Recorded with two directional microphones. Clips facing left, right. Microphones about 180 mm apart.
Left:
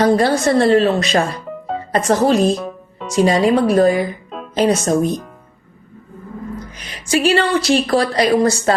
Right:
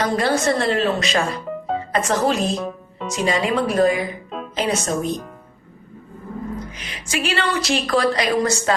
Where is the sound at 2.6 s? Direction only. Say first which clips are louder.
Even; centre (ahead or behind).